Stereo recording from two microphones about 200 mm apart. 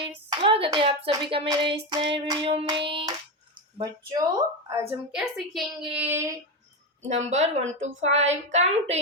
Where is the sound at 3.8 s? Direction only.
20° right (ahead or behind).